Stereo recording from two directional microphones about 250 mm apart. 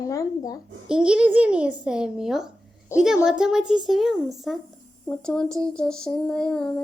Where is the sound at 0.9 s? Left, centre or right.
Centre.